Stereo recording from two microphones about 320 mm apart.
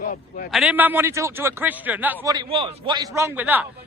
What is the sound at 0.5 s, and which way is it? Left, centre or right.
A man's voice, centre.